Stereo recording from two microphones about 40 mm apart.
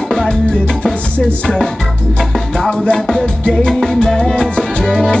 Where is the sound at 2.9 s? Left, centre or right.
Centre.